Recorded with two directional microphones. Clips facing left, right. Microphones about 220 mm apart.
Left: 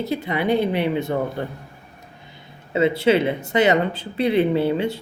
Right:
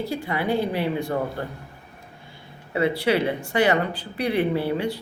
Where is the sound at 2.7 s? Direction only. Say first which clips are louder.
Left 4 dB; 20° left (ahead or behind).